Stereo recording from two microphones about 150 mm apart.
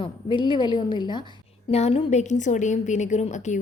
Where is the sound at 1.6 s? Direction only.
45° left (ahead or behind).